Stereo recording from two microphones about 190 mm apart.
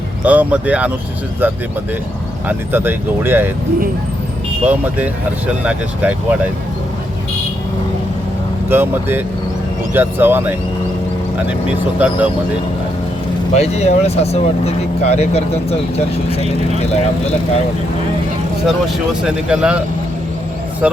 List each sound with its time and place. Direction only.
0.3 s speech: 5° right (ahead or behind)
2.5 s speech: 10° right (ahead or behind)
4.6 s speech: 10° right (ahead or behind)
8.7 s speech: 10° right (ahead or behind)
11.9 s speech: 5° right (ahead or behind)
13.5 s speech: 35° left (ahead or behind)
19.2 s speech: 5° right (ahead or behind)
20.8 s speech: 5° right (ahead or behind)